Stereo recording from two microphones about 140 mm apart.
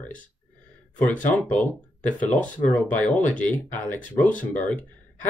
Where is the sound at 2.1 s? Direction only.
60° left (ahead or behind).